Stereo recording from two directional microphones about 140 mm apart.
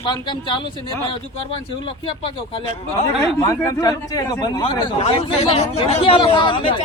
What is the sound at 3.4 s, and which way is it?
A man's voice, 25° left (ahead or behind).